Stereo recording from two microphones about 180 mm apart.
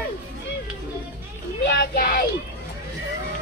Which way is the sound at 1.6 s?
75° left (ahead or behind).